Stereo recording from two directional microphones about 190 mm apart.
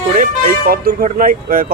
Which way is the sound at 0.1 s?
45° right (ahead or behind).